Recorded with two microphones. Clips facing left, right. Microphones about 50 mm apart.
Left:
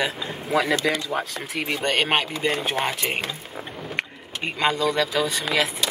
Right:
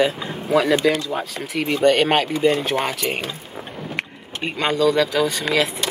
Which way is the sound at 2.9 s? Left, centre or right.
Left.